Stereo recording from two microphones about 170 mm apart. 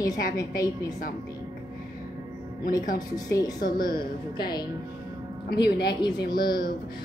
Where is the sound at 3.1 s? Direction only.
20° left (ahead or behind).